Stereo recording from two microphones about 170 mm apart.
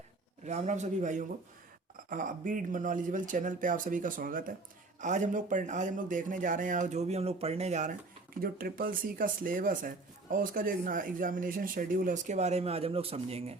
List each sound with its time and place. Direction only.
0.4 s speech: 40° right (ahead or behind)
8.4 s speech: 60° right (ahead or behind); by 13.6 s 35° right (ahead or behind)